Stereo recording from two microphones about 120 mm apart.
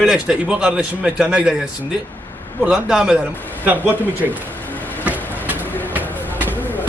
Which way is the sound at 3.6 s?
15° right (ahead or behind).